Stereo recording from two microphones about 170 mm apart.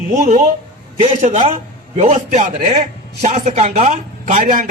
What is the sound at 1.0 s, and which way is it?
A man's voice, 45° right (ahead or behind).